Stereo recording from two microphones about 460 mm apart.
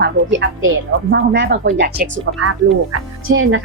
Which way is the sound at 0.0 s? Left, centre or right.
Right.